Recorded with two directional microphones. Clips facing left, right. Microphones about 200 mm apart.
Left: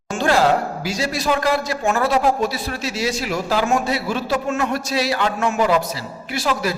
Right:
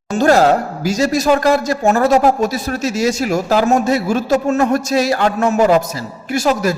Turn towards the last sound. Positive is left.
turn(degrees=-45)  # may be behind; listen again after turning